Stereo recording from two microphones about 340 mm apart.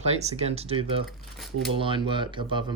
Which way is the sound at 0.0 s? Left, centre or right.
Centre.